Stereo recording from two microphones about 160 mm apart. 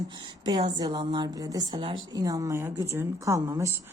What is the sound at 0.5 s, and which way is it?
A woman's voice, 35° right (ahead or behind).